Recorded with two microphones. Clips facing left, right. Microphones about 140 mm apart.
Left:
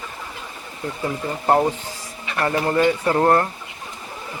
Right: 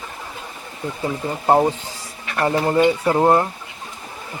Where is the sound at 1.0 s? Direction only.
15° right (ahead or behind).